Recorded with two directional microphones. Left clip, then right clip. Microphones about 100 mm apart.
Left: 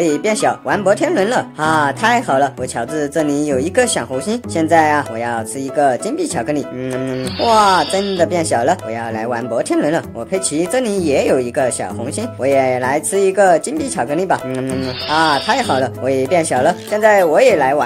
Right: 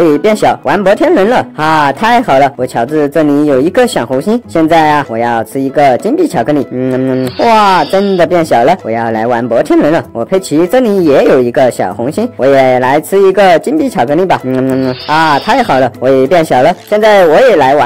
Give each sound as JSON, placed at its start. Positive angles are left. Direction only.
{"t": 0.0, "sound": "speech", "side_deg": -40}
{"t": 7.9, "sound": "speech", "side_deg": 0}
{"t": 8.3, "sound": "speech", "side_deg": -45}